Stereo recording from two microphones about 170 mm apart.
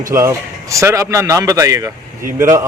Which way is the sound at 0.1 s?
15° right (ahead or behind).